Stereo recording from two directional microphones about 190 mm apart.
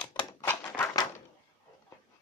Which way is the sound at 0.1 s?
15° left (ahead or behind).